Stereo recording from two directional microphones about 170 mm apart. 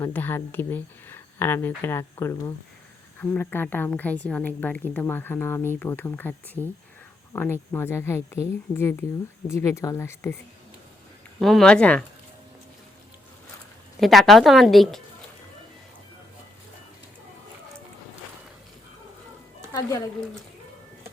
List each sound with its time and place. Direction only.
0.0 s a woman's voice: 10° left (ahead or behind)
11.3 s speech: centre (ahead or behind)
14.0 s speech: centre (ahead or behind)